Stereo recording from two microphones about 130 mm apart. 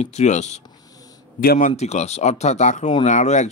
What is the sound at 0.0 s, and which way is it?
Speech, 60° left (ahead or behind).